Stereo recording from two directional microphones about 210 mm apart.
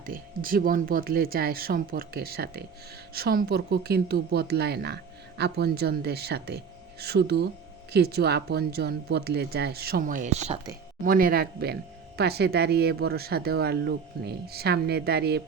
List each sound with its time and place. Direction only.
0.0 s speech: 45° right (ahead or behind)
11.0 s speech: 45° right (ahead or behind)